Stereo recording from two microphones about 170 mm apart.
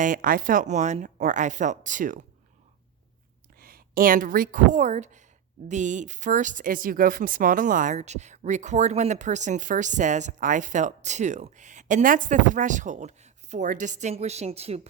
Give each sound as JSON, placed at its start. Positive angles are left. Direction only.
{"t": 0.0, "sound": "speech", "side_deg": -55}
{"t": 3.6, "sound": "a woman's voice", "side_deg": -60}